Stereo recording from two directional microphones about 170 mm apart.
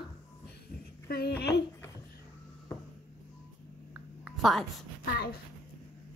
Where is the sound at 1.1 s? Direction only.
65° left (ahead or behind).